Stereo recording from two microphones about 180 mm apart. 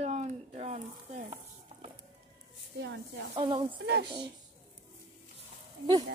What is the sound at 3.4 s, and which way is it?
Speech, 25° right (ahead or behind).